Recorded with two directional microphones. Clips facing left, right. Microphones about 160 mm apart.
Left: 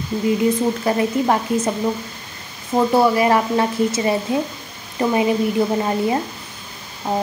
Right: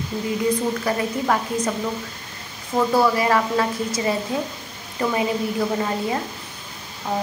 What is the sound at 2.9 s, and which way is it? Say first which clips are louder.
A woman's voice: left 3 dB; 25° left (ahead or behind).